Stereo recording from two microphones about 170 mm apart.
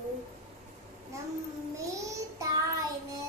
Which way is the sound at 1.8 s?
20° right (ahead or behind).